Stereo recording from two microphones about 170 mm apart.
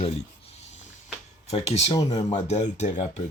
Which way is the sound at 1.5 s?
40° left (ahead or behind).